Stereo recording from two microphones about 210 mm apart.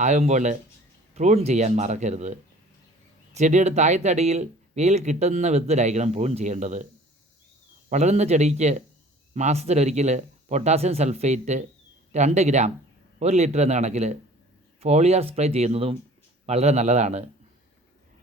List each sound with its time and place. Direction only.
0.0 s speech: 35° right (ahead or behind)
7.9 s speech: 35° right (ahead or behind)